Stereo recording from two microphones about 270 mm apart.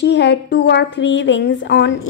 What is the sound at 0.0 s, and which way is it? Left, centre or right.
A woman's voice, left.